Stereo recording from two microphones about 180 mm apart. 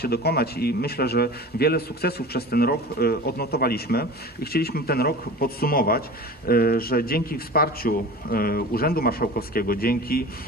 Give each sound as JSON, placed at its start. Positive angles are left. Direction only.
{"t": 0.0, "sound": "a man's voice", "side_deg": 60}